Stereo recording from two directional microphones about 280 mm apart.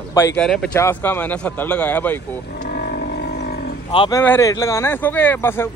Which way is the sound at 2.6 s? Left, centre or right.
Left.